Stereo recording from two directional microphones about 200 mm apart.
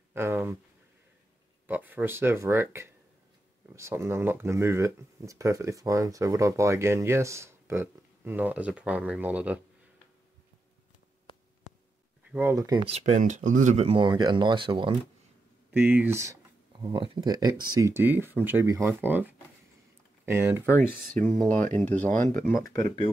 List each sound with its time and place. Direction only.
0.1 s speech: 10° right (ahead or behind)
1.7 s speech: 10° right (ahead or behind)
11.7 s a sound: 35° left (ahead or behind)
12.3 s speech: 10° right (ahead or behind)
12.9 s speech: 35° right (ahead or behind)
15.7 s speech: 10° right (ahead or behind)
16.8 s speech: 25° right (ahead or behind)
20.6 s speech: 10° left (ahead or behind)
22.1 s speech: 40° right (ahead or behind)
22.4 s speech: 15° left (ahead or behind)